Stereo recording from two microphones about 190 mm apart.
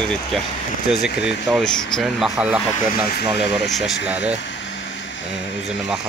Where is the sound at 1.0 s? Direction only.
Centre (ahead or behind).